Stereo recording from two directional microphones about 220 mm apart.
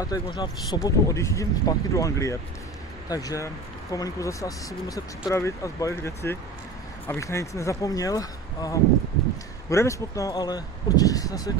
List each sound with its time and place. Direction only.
0.0 s speech: 20° left (ahead or behind)